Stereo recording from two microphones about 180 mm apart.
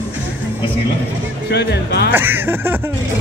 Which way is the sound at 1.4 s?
65° left (ahead or behind).